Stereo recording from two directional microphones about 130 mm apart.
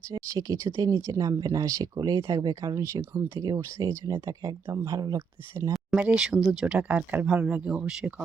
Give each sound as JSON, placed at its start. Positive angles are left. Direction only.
{"t": 0.1, "sound": "speech", "side_deg": -30}
{"t": 3.0, "sound": "speech", "side_deg": -15}
{"t": 4.0, "sound": "speech", "side_deg": -30}
{"t": 5.7, "sound": "speech", "side_deg": -5}